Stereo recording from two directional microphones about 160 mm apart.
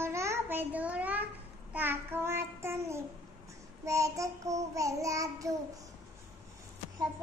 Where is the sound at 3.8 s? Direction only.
20° right (ahead or behind).